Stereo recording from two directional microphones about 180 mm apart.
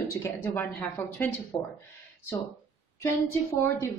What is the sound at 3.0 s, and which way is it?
Speech, 15° left (ahead or behind).